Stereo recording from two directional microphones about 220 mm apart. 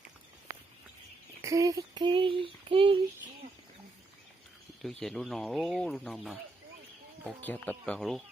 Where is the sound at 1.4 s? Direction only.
15° right (ahead or behind).